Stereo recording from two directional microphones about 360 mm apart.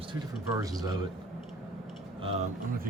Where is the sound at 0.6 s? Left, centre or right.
Centre.